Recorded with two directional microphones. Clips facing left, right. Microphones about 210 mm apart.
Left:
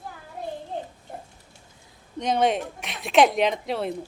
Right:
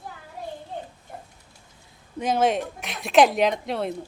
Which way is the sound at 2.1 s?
5° right (ahead or behind).